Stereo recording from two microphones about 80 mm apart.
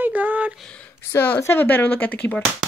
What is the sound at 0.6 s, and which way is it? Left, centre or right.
Speech, centre.